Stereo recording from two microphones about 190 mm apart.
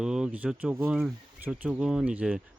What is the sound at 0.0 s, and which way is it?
Speech, 5° right (ahead or behind).